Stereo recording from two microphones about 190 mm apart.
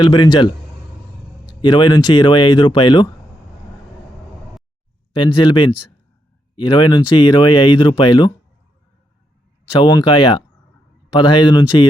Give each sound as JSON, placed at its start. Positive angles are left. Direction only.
{"t": 0.0, "sound": "speech", "side_deg": 20}
{"t": 5.1, "sound": "speech", "side_deg": 25}
{"t": 9.8, "sound": "speech", "side_deg": 25}